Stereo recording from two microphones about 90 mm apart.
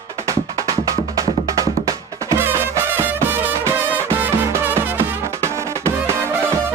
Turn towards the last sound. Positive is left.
turn(degrees=-25)  # may be behind; listen again after turning